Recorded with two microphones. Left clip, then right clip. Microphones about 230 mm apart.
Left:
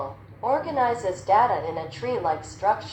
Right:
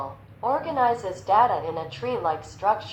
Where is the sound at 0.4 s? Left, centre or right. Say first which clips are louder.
Even; right.